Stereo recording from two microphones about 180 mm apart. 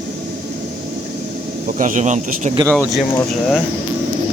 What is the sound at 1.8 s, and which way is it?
Speech, 45° right (ahead or behind).